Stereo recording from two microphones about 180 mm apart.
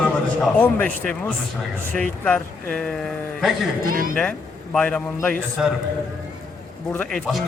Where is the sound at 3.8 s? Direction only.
50° right (ahead or behind).